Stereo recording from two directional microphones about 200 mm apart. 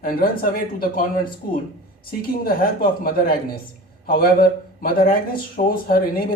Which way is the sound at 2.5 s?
50° left (ahead or behind).